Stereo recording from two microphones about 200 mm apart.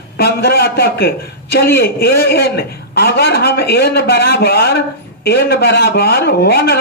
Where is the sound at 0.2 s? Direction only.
55° left (ahead or behind).